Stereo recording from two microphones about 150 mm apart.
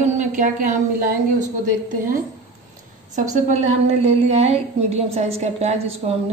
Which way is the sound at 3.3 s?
50° right (ahead or behind).